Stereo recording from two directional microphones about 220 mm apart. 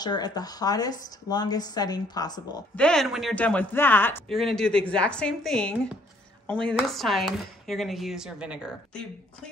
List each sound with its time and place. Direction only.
0.0 s a woman's voice: 20° left (ahead or behind)
2.7 s speech: 5° left (ahead or behind)